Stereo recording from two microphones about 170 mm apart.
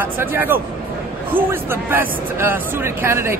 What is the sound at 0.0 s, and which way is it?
Speech, 10° right (ahead or behind).